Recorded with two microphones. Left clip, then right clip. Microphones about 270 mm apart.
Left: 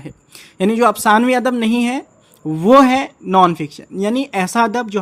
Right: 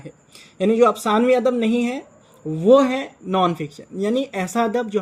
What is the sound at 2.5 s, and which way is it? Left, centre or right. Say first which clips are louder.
Speech: left 4 dB; left.